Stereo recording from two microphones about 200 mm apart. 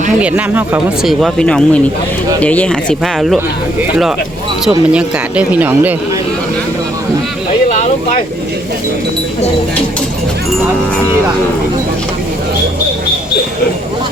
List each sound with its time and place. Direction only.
0.2 s speech: 5° right (ahead or behind)
1.2 s speech: 5° left (ahead or behind)
3.2 s speech: 5° right (ahead or behind)
7.7 s a sound: 35° left (ahead or behind)